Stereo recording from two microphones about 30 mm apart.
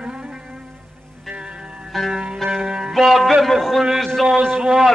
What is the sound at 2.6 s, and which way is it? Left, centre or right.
Music, right.